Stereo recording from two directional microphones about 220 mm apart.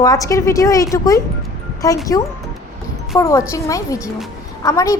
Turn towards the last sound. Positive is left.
turn(degrees=15)  # may be behind; listen again after turning